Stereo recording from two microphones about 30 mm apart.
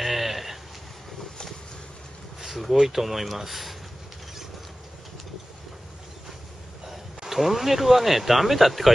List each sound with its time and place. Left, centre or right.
0.0 s a sound: centre
2.8 s speech: centre
7.3 s speech: centre